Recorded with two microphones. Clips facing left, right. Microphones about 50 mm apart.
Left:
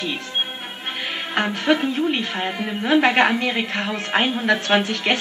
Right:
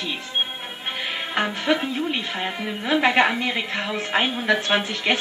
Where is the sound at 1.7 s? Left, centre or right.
Centre.